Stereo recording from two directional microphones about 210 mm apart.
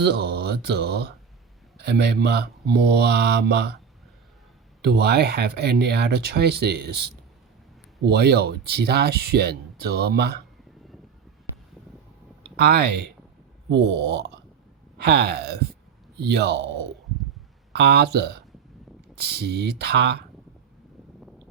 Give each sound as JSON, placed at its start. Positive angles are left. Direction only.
{"t": 0.0, "sound": "speech", "side_deg": -50}
{"t": 4.8, "sound": "speech", "side_deg": -50}
{"t": 12.5, "sound": "speech", "side_deg": -50}